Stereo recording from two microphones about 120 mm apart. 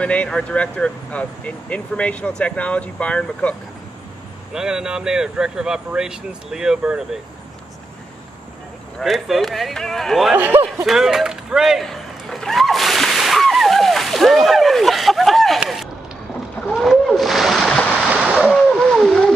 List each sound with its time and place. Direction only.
0.0 s speech: 10° left (ahead or behind)
4.6 s speech: 5° right (ahead or behind)
9.0 s speech: centre (ahead or behind)
10.3 s speech: 15° right (ahead or behind)
10.9 s a sound: 5° right (ahead or behind)
16.6 s splash: centre (ahead or behind)
18.0 s a sound: 10° right (ahead or behind)
18.4 s splash: centre (ahead or behind)